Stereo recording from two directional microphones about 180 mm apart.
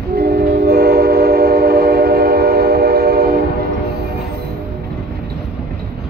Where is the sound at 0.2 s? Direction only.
60° right (ahead or behind).